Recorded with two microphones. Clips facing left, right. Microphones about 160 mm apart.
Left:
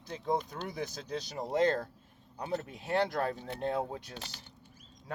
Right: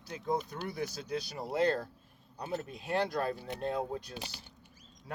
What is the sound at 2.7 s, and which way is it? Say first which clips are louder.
Speech: left 1 dB; 15° right (ahead or behind).